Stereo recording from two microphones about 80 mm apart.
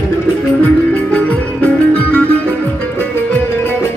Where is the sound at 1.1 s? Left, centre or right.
Centre.